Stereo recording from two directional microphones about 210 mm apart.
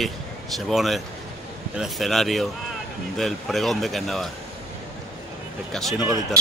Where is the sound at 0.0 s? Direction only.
Centre (ahead or behind).